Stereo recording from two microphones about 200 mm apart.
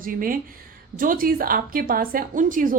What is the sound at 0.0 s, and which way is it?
A woman's voice, 45° right (ahead or behind).